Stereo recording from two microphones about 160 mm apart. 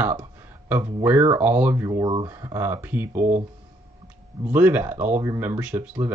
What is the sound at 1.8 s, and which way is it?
Speech, 25° right (ahead or behind).